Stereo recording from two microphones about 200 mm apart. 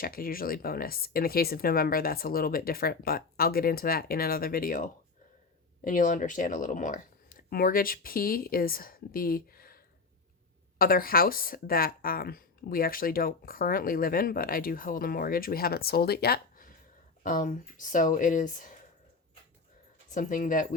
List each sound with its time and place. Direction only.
0.0 s speech: 45° left (ahead or behind)
20.1 s speech: 40° left (ahead or behind)